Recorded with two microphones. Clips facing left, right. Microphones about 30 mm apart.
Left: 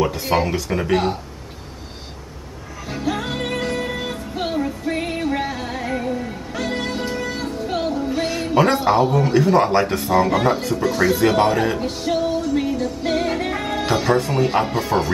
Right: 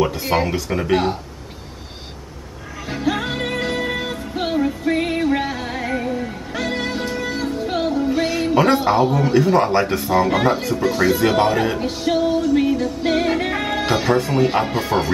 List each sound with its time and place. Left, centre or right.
0.0 s speech: centre
2.9 s music: centre
7.5 s speech: centre